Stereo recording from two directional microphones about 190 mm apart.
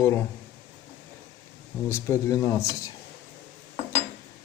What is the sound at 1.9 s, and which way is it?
Speech, 15° left (ahead or behind).